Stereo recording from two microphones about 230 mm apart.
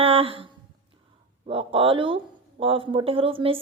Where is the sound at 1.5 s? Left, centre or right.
Right.